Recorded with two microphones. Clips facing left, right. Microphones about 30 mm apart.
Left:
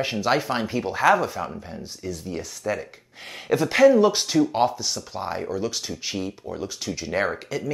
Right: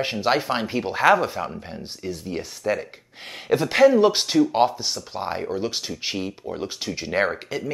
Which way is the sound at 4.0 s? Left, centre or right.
Right.